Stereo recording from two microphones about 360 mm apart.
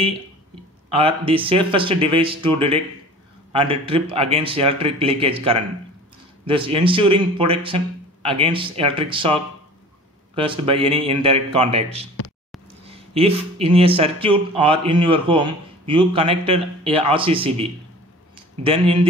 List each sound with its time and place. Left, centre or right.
0.8 s speech: centre